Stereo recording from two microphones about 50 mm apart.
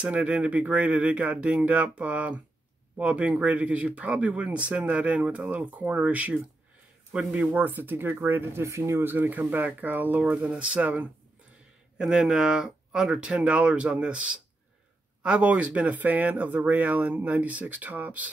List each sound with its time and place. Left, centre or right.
0.0 s speech: right
7.3 s speech: right
8.6 s speech: right
9.0 s speech: right
10.3 s speech: right
12.0 s speech: centre
13.2 s speech: right